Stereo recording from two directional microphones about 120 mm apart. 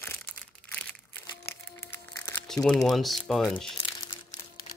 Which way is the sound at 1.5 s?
20° left (ahead or behind).